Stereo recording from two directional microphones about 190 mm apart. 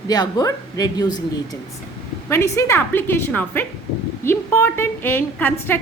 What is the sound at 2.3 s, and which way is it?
A woman's voice, 15° left (ahead or behind).